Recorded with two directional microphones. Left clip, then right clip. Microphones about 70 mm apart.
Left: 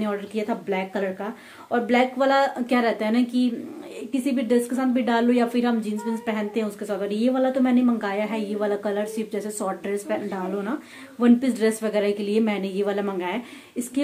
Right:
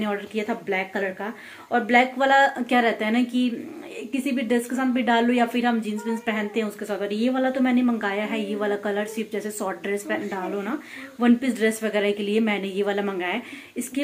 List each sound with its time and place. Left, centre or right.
0.3 s a woman's voice: centre
7.8 s a woman's voice: centre